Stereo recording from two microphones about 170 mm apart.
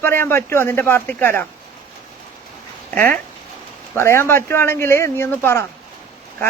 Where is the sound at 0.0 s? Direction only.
15° left (ahead or behind).